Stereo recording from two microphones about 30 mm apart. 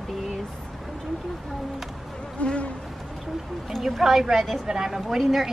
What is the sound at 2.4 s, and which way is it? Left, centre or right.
Insect, left.